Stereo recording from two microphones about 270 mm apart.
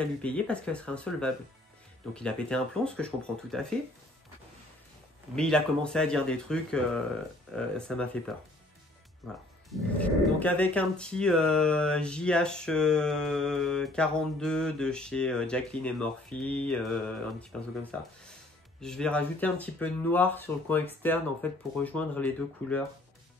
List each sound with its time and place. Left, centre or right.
0.0 s speech: centre
5.3 s speech: centre
9.7 s speech: centre
18.8 s speech: centre